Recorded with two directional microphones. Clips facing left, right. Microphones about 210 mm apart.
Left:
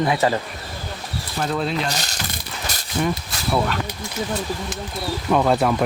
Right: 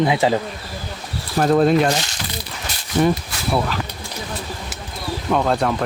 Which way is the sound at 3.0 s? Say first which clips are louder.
Right 6 dB; 45° right (ahead or behind).